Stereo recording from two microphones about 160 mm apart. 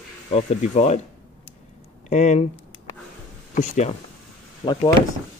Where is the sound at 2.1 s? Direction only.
45° left (ahead or behind).